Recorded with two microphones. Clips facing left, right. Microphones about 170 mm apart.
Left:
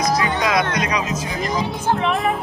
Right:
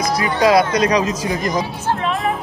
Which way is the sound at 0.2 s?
35° right (ahead or behind).